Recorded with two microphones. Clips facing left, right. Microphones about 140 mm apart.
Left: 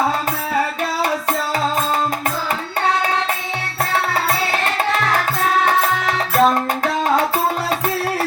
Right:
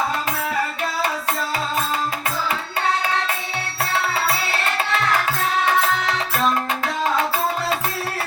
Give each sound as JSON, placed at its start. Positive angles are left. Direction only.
{"t": 5.6, "sound": "music", "side_deg": 40}